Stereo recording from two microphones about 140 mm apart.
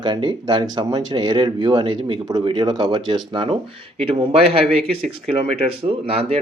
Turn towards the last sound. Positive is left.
turn(degrees=-45)  # may be behind; listen again after turning